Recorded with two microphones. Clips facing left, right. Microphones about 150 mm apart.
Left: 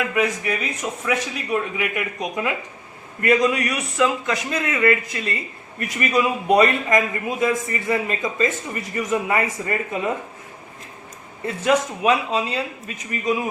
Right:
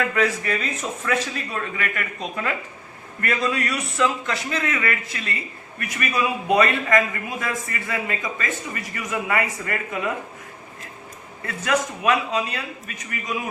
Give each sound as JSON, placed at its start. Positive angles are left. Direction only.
{"t": 0.0, "sound": "a man's voice", "side_deg": 15}
{"t": 11.4, "sound": "a man's voice", "side_deg": 25}